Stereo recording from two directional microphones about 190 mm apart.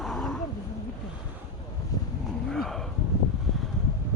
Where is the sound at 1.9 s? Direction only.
20° left (ahead or behind).